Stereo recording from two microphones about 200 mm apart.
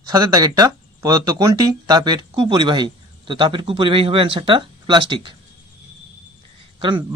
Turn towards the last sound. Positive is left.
turn(degrees=-25)  # may be behind; listen again after turning